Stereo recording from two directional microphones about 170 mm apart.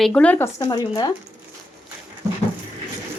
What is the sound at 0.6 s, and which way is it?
Speech, 25° left (ahead or behind).